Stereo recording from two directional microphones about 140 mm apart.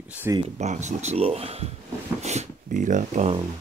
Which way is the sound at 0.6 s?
55° right (ahead or behind).